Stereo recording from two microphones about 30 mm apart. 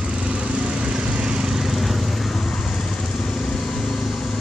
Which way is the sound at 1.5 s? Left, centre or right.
Centre.